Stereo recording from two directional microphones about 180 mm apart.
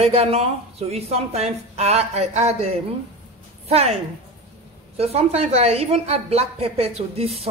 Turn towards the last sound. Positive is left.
turn(degrees=-35)  # may be behind; listen again after turning